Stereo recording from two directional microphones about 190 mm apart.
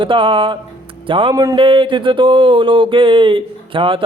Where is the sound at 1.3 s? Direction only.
15° right (ahead or behind).